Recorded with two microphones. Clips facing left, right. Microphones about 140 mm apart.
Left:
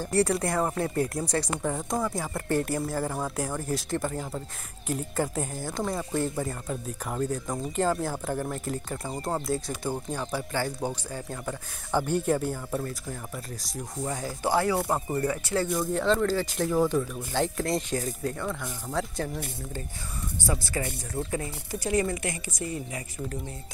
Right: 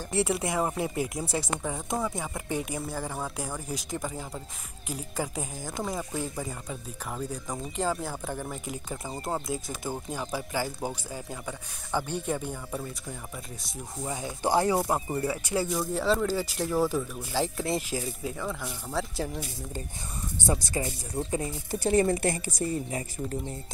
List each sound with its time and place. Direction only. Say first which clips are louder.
0.1 s speech: left 2 dB; centre (ahead or behind)
5.6 s speech: left 1 dB; 15° right (ahead or behind)
5.9 s speech: left 4 dB; centre (ahead or behind)
11.9 s speech: left 5 dB; 10° left (ahead or behind)
14.4 s speech: right 1 dB; 20° right (ahead or behind)
14.9 s speech: left 1 dB; centre (ahead or behind)
15.7 s speech: left 2 dB; centre (ahead or behind)
20.4 s a woman's voice: right 1 dB; 20° right (ahead or behind)